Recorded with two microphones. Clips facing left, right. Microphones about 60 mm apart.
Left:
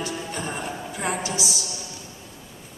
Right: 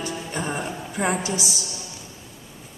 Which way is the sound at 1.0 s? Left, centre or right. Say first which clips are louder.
Right 4 dB; centre.